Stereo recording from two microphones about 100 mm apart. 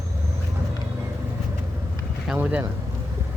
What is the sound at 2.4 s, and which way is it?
Speech, 15° right (ahead or behind).